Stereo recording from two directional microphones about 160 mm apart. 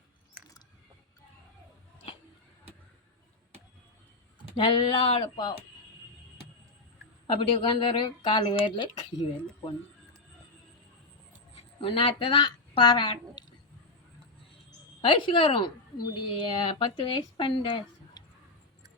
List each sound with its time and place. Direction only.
4.5 s speech: 30° left (ahead or behind)
7.3 s speech: 35° left (ahead or behind)
11.5 s a woman's voice: 35° left (ahead or behind)
15.0 s speech: 30° left (ahead or behind)